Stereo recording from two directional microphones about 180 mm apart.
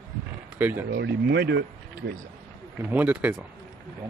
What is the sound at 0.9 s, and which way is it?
Speech, 65° right (ahead or behind).